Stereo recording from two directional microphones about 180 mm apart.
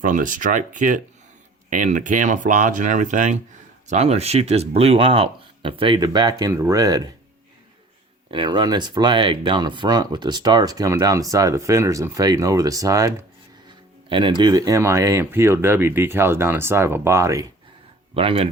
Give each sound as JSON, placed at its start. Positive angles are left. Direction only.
{"t": 0.0, "sound": "speech", "side_deg": -45}
{"t": 8.3, "sound": "speech", "side_deg": -25}
{"t": 18.1, "sound": "speech", "side_deg": -30}